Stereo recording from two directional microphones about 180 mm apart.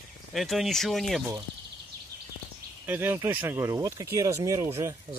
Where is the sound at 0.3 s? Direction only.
Centre (ahead or behind).